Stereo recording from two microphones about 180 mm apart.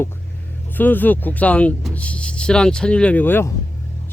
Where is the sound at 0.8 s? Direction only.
10° left (ahead or behind).